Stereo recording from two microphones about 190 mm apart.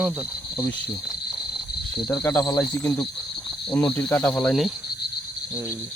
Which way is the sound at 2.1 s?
20° left (ahead or behind).